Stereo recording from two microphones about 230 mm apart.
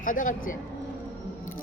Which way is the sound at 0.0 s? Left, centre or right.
Left.